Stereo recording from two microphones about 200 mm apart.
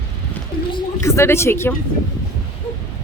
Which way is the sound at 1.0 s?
15° left (ahead or behind).